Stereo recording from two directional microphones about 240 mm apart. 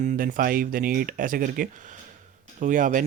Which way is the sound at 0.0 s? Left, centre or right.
Right.